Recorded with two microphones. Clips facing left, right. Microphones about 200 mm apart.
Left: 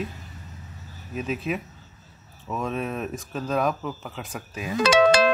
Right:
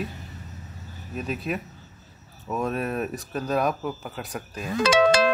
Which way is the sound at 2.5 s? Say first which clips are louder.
Right 2 dB; 5° right (ahead or behind).